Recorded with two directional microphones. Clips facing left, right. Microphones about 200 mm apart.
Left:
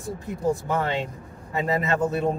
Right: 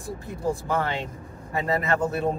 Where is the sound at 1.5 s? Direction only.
20° left (ahead or behind).